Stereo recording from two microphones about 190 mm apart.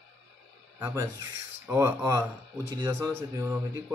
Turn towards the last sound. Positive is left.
turn(degrees=-15)  # may be behind; listen again after turning